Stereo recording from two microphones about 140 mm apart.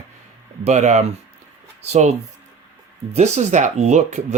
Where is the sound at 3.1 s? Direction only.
55° right (ahead or behind).